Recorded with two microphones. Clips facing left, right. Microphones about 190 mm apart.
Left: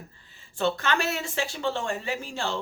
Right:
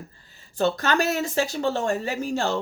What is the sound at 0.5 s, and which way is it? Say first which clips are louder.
Speech: right 3 dB; 40° right (ahead or behind).